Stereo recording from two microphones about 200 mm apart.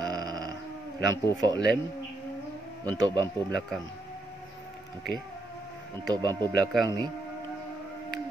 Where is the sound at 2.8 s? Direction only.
20° right (ahead or behind).